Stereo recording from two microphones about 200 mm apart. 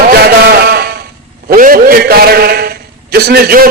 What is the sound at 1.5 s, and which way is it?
A man's voice, 45° right (ahead or behind).